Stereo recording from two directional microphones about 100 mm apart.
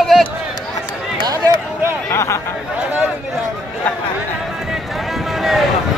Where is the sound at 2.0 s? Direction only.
30° left (ahead or behind).